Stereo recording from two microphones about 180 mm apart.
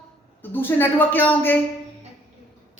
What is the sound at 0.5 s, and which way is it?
A man's voice, 10° left (ahead or behind).